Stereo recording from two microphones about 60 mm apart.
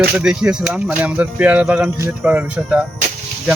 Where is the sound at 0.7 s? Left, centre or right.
Right.